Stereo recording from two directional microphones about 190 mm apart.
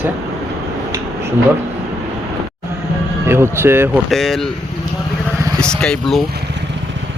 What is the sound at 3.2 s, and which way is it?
Speech, 10° right (ahead or behind).